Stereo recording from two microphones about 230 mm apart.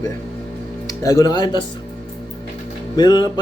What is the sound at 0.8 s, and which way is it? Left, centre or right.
Speech, centre.